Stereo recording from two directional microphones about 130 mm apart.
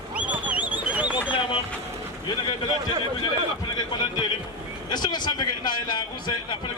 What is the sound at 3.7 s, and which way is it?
A man's voice, 35° left (ahead or behind).